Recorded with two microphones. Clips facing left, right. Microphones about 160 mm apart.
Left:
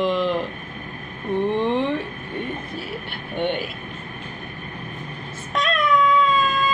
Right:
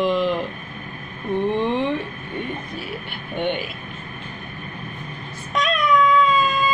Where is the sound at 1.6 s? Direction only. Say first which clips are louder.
Even; centre (ahead or behind).